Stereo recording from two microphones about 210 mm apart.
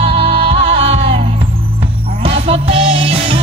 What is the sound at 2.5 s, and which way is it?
Music, 30° right (ahead or behind).